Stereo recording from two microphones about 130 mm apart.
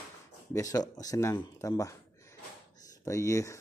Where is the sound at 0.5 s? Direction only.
25° left (ahead or behind).